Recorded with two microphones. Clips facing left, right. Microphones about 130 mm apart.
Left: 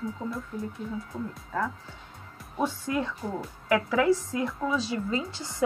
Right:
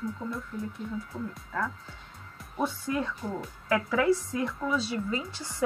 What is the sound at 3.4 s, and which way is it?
Speech, 5° left (ahead or behind).